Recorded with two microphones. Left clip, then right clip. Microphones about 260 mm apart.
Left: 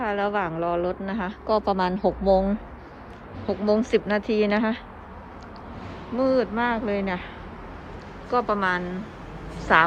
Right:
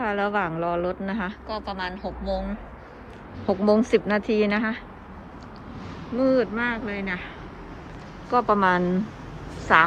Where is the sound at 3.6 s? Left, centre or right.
Centre.